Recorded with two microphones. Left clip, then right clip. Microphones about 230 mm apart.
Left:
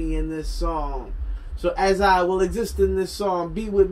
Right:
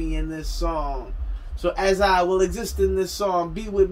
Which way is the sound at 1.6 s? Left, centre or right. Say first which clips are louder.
Left 1 dB; centre.